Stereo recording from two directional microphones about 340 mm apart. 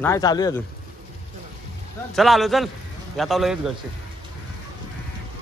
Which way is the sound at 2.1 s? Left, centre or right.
Centre.